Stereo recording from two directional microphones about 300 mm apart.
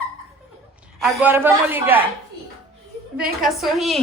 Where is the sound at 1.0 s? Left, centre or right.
Centre.